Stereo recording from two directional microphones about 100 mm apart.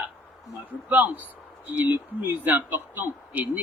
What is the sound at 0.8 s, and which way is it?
Speech, 15° right (ahead or behind).